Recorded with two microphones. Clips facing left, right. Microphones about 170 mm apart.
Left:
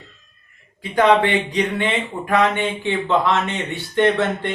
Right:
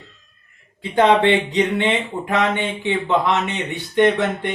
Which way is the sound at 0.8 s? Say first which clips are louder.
Even; 25° right (ahead or behind).